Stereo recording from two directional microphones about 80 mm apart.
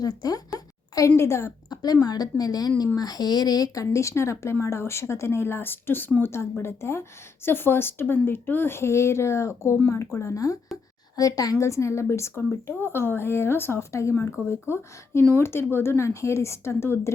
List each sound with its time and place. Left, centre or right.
0.0 s a woman's voice: left
1.7 s a woman's voice: left
11.6 s speech: left